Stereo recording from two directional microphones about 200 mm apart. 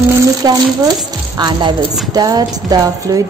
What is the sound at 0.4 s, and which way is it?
A woman's voice, 20° right (ahead or behind).